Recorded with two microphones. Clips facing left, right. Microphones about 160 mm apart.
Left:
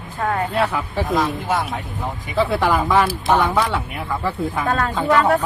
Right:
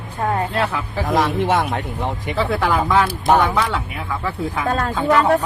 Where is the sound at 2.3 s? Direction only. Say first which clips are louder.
Left 2 dB; 5° left (ahead or behind).